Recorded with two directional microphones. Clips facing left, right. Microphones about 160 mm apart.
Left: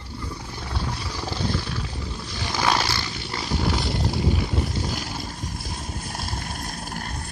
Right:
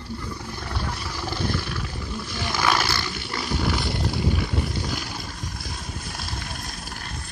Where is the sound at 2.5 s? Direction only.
25° left (ahead or behind).